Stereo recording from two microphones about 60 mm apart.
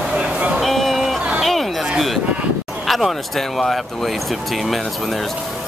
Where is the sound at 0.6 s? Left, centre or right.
Centre.